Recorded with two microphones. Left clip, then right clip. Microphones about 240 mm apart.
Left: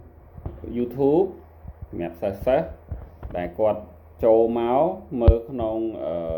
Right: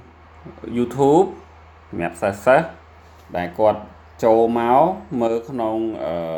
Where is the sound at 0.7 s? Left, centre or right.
Right.